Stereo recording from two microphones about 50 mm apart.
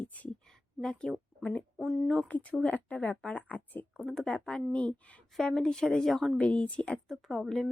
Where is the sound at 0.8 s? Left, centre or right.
Centre.